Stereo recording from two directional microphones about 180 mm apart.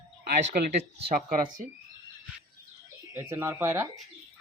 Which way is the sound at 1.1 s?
50° right (ahead or behind).